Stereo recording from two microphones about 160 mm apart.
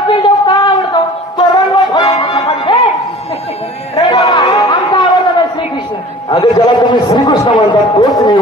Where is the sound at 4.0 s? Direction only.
25° left (ahead or behind).